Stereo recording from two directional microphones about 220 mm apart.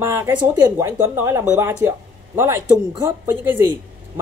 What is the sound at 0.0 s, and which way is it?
Speech, 10° right (ahead or behind).